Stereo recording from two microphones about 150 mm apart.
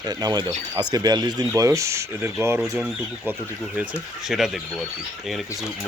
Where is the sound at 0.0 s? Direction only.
25° right (ahead or behind).